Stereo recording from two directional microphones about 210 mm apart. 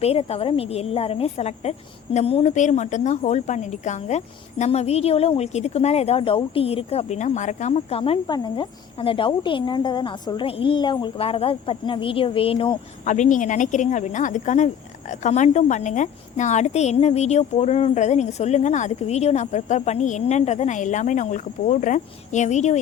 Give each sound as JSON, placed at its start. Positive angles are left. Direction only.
{"t": 0.0, "sound": "a woman's voice", "side_deg": 30}
{"t": 13.1, "sound": "speech", "side_deg": 35}